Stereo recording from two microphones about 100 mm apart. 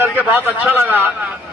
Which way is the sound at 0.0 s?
20° right (ahead or behind).